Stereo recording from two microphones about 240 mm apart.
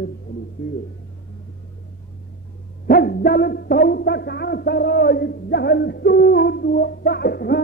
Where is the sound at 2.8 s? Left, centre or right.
Left.